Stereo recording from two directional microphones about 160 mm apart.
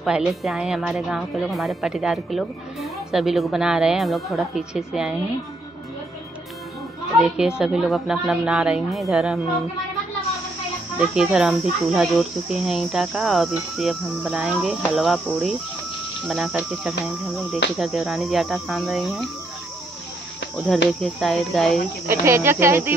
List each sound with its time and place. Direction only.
0.0 s speech: 5° right (ahead or behind)
7.2 s speech: 5° right (ahead or behind)
11.0 s speech: 5° right (ahead or behind)
20.7 s speech: centre (ahead or behind)
22.0 s speech: 15° right (ahead or behind)